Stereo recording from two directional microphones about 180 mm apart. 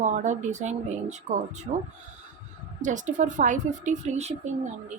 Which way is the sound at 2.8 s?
45° right (ahead or behind).